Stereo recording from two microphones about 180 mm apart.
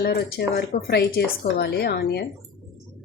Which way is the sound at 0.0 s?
65° left (ahead or behind).